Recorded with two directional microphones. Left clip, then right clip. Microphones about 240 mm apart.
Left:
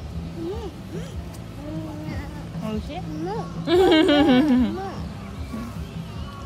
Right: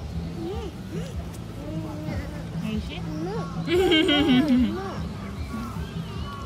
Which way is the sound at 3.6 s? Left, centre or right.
Centre.